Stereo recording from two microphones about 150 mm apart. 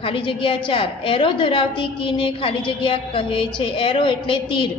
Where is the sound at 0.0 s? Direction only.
35° left (ahead or behind).